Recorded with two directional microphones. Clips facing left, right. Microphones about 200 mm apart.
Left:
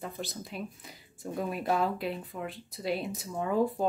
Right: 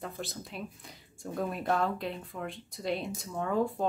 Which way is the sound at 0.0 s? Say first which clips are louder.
Left 1 dB; centre (ahead or behind).